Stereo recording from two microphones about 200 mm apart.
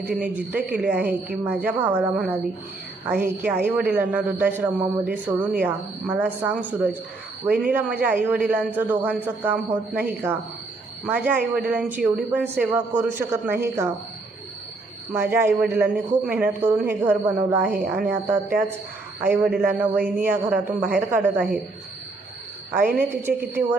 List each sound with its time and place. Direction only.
0.0 s a man's voice: 10° right (ahead or behind)
15.1 s a man's voice: 10° right (ahead or behind)
23.0 s a man's voice: 10° right (ahead or behind)